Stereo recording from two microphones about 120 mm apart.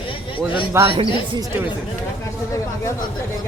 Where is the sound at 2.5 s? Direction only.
25° left (ahead or behind).